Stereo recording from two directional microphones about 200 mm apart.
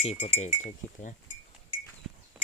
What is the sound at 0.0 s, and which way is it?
Speech, 30° left (ahead or behind).